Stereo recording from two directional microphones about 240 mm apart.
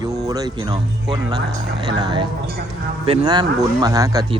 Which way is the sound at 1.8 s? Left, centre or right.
Centre.